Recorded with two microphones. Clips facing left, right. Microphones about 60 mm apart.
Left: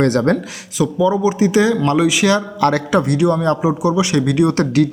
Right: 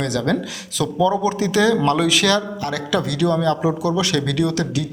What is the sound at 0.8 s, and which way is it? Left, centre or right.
Speech, centre.